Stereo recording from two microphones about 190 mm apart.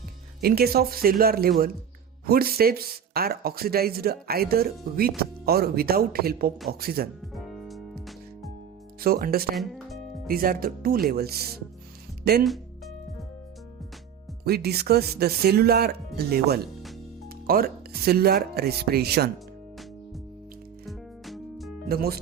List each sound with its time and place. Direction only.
0.4 s speech: 55° right (ahead or behind)
7.3 s music: centre (ahead or behind)
9.0 s speech: 50° right (ahead or behind)
9.6 s speech: centre (ahead or behind)
10.2 s speech: 50° right (ahead or behind)
14.4 s speech: 55° right (ahead or behind)
20.8 s music: centre (ahead or behind)
21.8 s speech: 55° right (ahead or behind)